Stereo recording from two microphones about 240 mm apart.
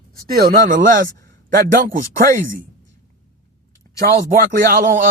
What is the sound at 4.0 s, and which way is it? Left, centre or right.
Speech, right.